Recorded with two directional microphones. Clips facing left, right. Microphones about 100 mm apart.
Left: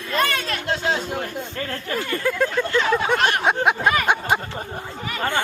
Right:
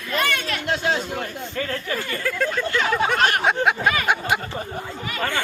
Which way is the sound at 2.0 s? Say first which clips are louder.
Left 6 dB; 20° left (ahead or behind).